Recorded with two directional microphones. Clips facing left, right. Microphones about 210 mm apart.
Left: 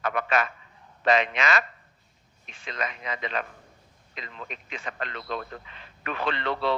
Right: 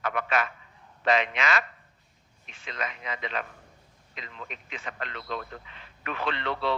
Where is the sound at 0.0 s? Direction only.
40° left (ahead or behind).